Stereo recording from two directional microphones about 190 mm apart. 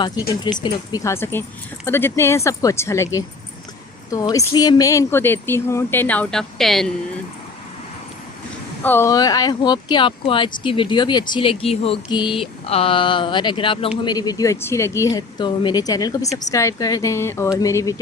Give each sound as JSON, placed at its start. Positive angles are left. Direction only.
{"t": 0.6, "sound": "speech", "side_deg": 20}
{"t": 8.8, "sound": "speech", "side_deg": 10}